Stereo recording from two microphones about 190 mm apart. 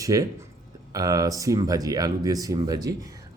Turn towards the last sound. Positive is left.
turn(degrees=-20)  # may be behind; listen again after turning